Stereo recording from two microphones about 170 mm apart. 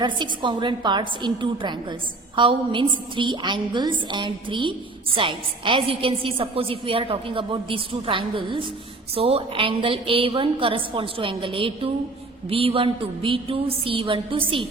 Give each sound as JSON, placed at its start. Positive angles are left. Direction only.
{"t": 0.0, "sound": "a woman's voice", "side_deg": -25}